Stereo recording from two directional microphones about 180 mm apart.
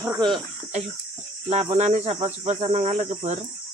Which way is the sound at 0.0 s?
20° right (ahead or behind).